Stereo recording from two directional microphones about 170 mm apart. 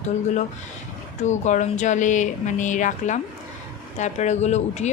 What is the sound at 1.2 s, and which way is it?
A woman's voice, 45° left (ahead or behind).